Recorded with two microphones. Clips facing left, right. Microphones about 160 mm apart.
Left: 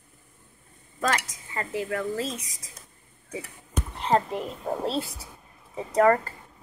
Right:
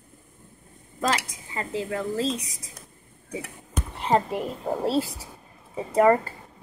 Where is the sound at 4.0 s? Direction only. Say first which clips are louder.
Right 1 dB; 10° right (ahead or behind).